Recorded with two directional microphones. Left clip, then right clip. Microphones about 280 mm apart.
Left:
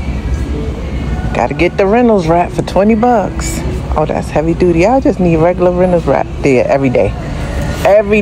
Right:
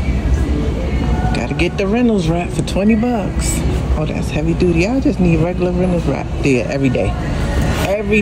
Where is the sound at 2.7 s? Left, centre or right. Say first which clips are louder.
Left 8 dB; left.